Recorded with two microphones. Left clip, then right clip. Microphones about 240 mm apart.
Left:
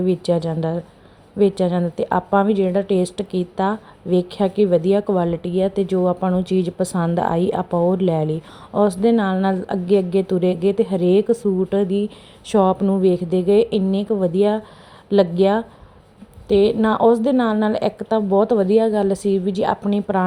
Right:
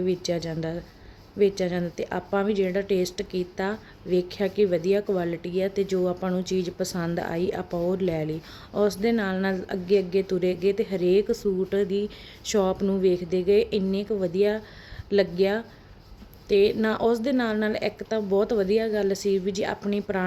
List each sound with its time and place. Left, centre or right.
0.0 s a woman's voice: centre